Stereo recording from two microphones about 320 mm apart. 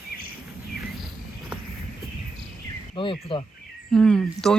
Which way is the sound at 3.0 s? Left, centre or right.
Centre.